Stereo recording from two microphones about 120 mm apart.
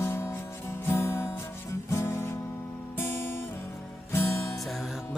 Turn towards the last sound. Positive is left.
turn(degrees=0)  # may be behind; listen again after turning